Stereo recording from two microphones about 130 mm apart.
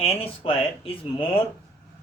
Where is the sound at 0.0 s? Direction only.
45° left (ahead or behind).